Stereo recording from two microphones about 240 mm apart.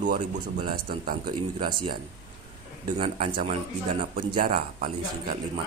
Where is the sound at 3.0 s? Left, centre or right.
Right.